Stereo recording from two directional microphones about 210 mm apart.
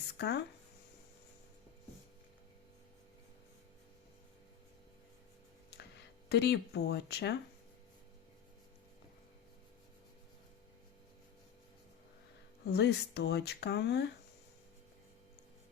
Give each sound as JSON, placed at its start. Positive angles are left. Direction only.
{"t": 0.2, "sound": "speech", "side_deg": 55}
{"t": 6.2, "sound": "speech", "side_deg": 50}
{"t": 12.6, "sound": "speech", "side_deg": 55}